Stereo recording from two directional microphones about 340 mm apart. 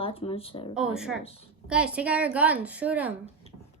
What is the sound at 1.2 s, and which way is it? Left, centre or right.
Speech, centre.